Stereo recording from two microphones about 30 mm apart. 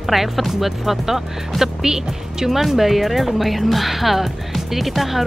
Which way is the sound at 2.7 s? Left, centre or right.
Centre.